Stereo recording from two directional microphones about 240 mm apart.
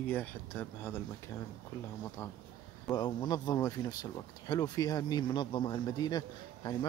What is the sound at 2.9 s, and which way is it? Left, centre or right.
Speech, centre.